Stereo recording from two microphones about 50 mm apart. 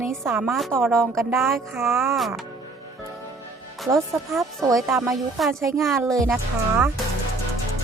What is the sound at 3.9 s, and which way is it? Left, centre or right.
A woman's voice, centre.